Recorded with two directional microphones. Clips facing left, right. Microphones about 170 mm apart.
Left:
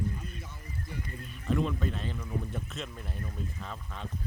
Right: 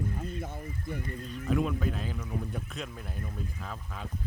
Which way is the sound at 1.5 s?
5° right (ahead or behind).